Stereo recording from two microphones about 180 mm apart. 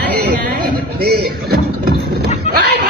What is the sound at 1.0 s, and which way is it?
Speech, 60° right (ahead or behind).